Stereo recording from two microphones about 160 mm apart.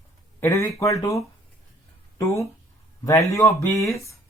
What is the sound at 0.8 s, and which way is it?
Speech, 20° left (ahead or behind).